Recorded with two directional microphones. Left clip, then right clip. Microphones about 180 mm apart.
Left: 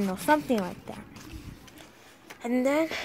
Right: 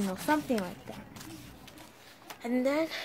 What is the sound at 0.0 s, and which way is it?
Speech, 20° left (ahead or behind).